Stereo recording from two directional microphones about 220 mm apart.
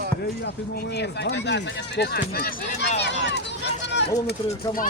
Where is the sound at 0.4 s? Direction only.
50° left (ahead or behind).